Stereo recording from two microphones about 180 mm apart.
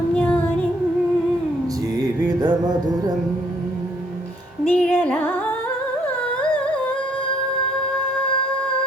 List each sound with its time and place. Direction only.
2.2 s music: 25° right (ahead or behind)
4.7 s music: 10° left (ahead or behind)